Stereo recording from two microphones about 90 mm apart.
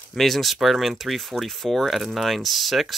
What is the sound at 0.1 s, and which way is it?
Speech, centre (ahead or behind).